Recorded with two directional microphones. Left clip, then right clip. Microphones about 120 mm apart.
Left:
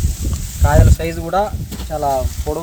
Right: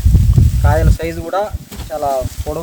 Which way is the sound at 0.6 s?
30° right (ahead or behind).